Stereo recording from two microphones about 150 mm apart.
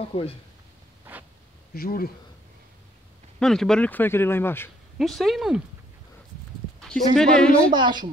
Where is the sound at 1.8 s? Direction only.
75° left (ahead or behind).